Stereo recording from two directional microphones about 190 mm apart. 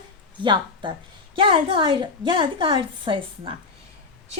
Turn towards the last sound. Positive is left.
turn(degrees=-25)  # may be behind; listen again after turning